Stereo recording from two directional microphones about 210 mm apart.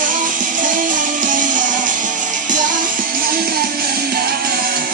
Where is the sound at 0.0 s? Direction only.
40° right (ahead or behind).